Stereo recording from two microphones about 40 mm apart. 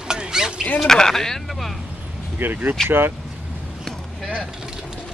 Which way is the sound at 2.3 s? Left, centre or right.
Right.